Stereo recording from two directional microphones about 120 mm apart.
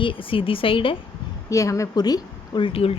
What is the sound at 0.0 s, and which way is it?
Speech, 45° left (ahead or behind).